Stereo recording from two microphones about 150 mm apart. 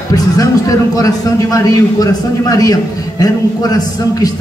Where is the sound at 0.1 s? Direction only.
25° left (ahead or behind).